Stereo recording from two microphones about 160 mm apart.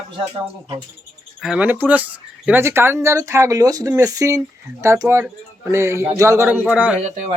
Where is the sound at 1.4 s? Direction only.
5° right (ahead or behind).